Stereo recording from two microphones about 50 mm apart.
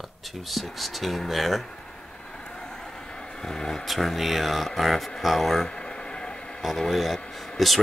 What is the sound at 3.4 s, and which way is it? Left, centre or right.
Speech, centre.